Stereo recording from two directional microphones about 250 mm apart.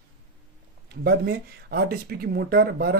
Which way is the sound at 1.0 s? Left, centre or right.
Right.